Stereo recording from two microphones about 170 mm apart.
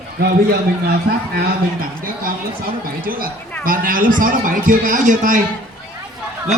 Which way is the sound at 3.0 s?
55° right (ahead or behind).